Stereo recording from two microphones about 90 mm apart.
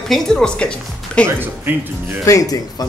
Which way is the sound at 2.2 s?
40° left (ahead or behind).